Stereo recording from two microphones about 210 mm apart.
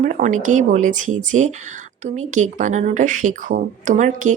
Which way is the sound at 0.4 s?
35° right (ahead or behind).